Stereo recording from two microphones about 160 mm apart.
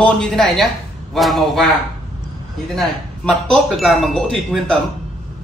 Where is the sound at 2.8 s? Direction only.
Centre (ahead or behind).